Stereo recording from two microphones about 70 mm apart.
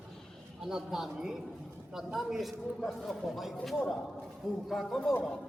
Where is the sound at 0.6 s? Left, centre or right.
Centre.